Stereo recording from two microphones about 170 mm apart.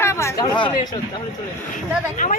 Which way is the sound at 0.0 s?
15° left (ahead or behind).